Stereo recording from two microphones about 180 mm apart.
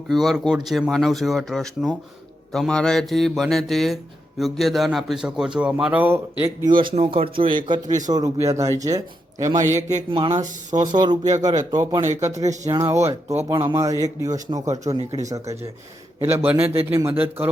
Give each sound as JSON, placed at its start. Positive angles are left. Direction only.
{"t": 0.1, "sound": "speech", "side_deg": 0}
{"t": 6.8, "sound": "speech", "side_deg": -30}
{"t": 10.1, "sound": "speech", "side_deg": -30}
{"t": 10.7, "sound": "speech", "side_deg": -20}